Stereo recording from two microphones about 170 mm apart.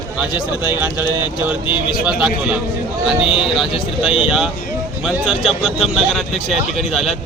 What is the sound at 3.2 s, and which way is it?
Speech, 30° left (ahead or behind).